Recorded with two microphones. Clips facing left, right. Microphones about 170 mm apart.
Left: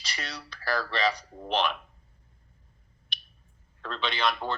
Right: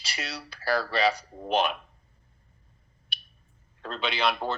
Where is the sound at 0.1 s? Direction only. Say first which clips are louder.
Right 2 dB; 5° right (ahead or behind).